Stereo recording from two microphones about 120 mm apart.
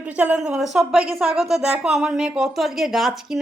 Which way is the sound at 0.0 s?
10° right (ahead or behind).